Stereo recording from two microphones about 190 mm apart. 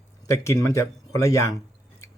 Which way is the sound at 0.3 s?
15° left (ahead or behind).